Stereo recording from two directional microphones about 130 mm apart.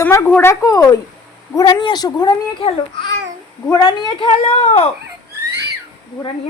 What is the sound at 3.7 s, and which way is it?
Speech, 35° left (ahead or behind).